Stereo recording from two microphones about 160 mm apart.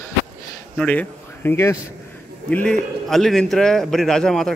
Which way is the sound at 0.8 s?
10° left (ahead or behind).